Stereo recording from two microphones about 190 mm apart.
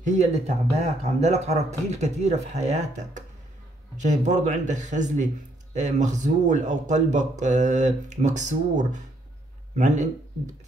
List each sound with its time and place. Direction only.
0.0 s speech: 40° right (ahead or behind)